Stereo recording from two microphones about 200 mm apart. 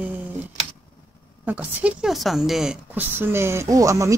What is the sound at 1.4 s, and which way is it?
A woman's voice, 10° right (ahead or behind).